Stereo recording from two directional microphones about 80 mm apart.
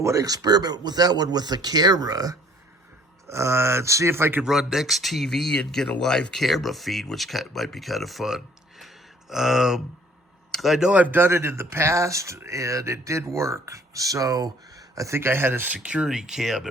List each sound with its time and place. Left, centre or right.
0.0 s speech: right
3.2 s speech: right
4.4 s speech: centre